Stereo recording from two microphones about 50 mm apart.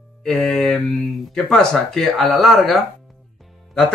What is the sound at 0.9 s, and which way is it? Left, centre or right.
Speech, centre.